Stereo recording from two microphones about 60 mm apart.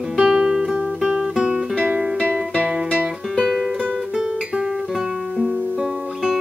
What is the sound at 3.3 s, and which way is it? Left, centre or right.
Music, centre.